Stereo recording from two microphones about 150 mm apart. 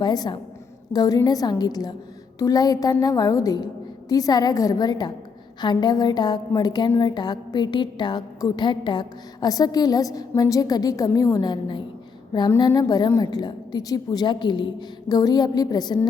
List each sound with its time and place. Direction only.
0.0 s a woman's voice: 25° left (ahead or behind)